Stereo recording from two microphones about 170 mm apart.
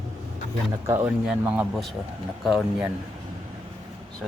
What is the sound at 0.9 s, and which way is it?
Speech, 20° right (ahead or behind).